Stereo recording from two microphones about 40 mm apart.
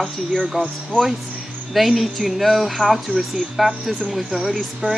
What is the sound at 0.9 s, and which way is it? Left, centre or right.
Speech, right.